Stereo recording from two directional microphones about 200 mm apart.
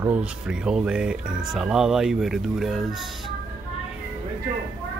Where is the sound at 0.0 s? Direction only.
5° right (ahead or behind).